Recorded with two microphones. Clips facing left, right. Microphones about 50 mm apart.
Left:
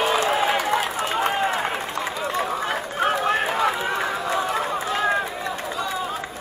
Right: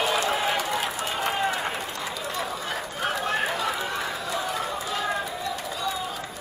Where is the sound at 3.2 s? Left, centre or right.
Left.